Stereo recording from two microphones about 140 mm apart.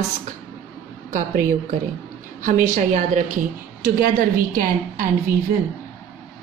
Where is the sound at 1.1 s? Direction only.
80° right; by 3.2 s 65° right (ahead or behind).